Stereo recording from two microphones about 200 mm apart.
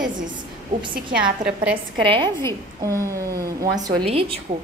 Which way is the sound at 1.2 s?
5° right (ahead or behind).